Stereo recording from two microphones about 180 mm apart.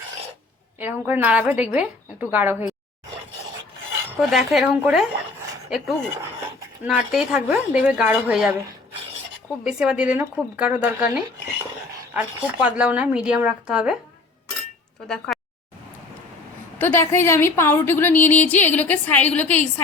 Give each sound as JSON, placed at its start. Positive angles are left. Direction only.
{"t": 0.8, "sound": "speech", "side_deg": -10}
{"t": 4.2, "sound": "speech", "side_deg": 0}
{"t": 9.6, "sound": "speech", "side_deg": -5}
{"t": 15.0, "sound": "speech", "side_deg": 5}
{"t": 16.7, "sound": "a woman's voice", "side_deg": 10}